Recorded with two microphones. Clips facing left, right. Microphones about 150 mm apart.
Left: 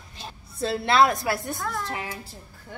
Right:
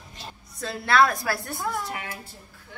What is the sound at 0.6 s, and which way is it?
A woman's voice, 25° left (ahead or behind).